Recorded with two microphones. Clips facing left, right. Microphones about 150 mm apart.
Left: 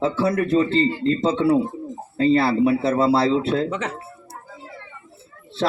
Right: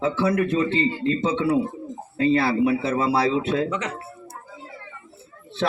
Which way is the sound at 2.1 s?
30° left (ahead or behind).